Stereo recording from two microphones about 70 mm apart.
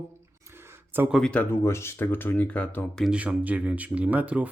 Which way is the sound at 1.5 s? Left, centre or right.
Left.